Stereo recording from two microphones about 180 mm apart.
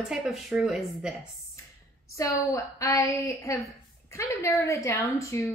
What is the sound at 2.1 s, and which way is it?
Speech, 15° left (ahead or behind).